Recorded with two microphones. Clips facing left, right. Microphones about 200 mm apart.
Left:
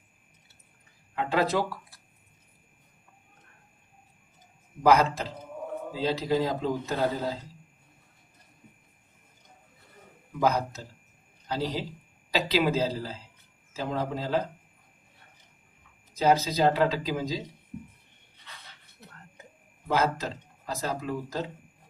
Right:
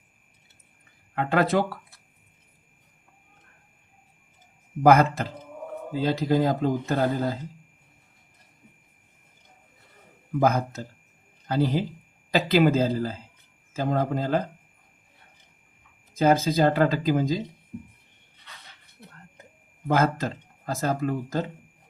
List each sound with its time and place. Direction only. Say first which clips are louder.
1.1 s speech: right 3 dB; 55° right (ahead or behind)
4.8 s speech: right 4 dB; 55° right (ahead or behind)
10.4 s speech: right 2 dB; 55° right (ahead or behind)
16.1 s speech: right 3 dB; 50° right (ahead or behind)
19.9 s speech: right 3 dB; 50° right (ahead or behind)